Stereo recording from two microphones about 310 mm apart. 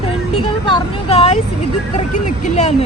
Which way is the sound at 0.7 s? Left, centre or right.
Centre.